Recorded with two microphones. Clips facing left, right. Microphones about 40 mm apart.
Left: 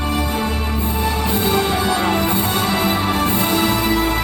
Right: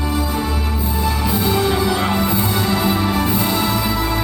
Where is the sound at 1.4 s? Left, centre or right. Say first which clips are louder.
Right 1 dB; left.